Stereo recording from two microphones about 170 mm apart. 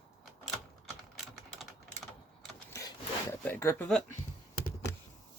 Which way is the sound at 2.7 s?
20° left (ahead or behind).